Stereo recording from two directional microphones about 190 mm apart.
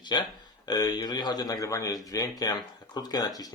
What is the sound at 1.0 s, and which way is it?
Speech, 20° left (ahead or behind).